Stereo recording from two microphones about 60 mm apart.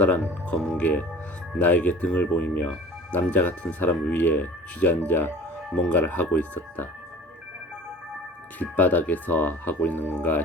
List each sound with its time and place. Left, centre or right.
0.0 s speech: left
8.5 s speech: left